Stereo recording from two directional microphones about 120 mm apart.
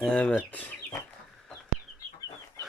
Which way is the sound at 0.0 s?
10° left (ahead or behind).